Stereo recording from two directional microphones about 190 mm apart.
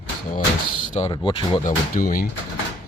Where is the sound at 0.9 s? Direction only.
35° left (ahead or behind).